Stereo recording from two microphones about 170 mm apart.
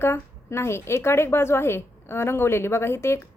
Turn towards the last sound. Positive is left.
turn(degrees=15)  # may be behind; listen again after turning